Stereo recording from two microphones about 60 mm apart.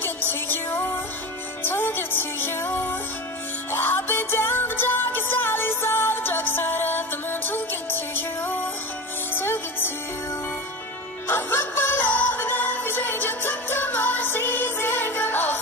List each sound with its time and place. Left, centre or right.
0.0 s music: left
11.2 s music: left